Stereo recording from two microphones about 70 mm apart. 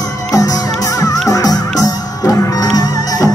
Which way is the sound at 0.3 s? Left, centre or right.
Left.